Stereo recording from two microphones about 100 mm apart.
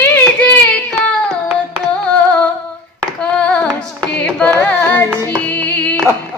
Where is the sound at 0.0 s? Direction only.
15° left (ahead or behind).